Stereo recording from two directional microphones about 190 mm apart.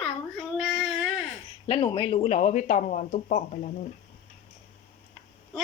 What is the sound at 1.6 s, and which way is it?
Speech, 25° left (ahead or behind).